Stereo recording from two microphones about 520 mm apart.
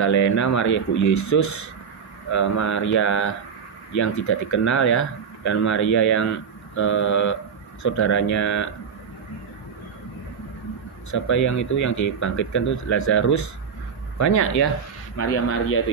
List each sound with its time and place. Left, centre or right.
0.0 s speech: left
11.1 s speech: left